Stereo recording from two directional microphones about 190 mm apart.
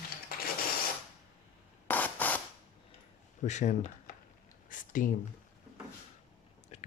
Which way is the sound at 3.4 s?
40° left (ahead or behind).